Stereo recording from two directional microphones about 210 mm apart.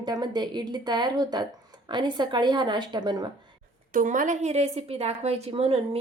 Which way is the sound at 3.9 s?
40° right (ahead or behind).